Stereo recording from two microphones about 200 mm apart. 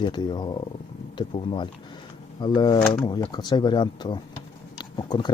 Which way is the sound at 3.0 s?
20° left (ahead or behind).